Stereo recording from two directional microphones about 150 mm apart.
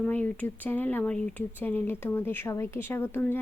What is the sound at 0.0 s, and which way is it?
Speech, 10° left (ahead or behind).